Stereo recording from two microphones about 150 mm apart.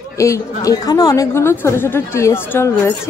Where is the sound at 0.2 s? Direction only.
20° left (ahead or behind).